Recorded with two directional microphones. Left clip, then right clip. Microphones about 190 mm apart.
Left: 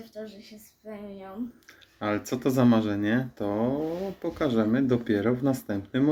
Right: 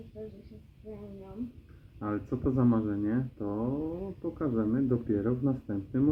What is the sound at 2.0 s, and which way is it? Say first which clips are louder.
Speech: left 6 dB; 20° left (ahead or behind).